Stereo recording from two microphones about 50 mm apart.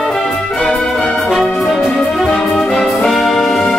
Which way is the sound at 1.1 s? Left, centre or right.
Centre.